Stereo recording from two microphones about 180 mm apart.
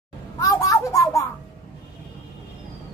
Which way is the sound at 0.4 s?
20° left (ahead or behind).